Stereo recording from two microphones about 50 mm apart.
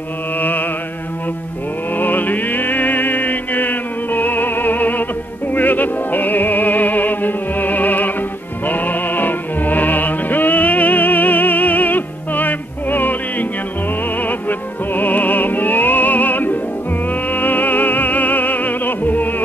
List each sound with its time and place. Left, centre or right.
0.4 s mantra: left
2.0 s music: left